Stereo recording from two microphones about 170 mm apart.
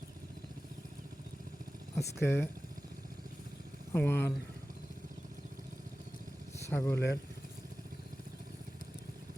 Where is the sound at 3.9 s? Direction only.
10° left (ahead or behind).